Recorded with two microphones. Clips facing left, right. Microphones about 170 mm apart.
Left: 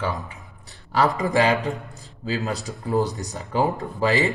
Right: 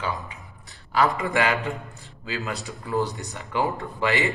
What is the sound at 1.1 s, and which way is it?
A man's voice, 35° left (ahead or behind).